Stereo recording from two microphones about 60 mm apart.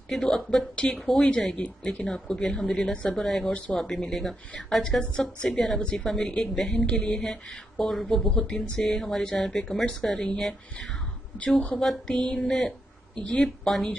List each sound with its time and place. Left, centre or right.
0.1 s speech: centre
0.7 s a woman's voice: left
1.0 s speech: centre
11.3 s a woman's voice: left
11.7 s speech: centre
12.2 s speech: centre